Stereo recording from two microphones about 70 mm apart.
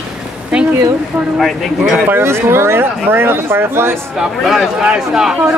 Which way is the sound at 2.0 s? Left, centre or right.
Right.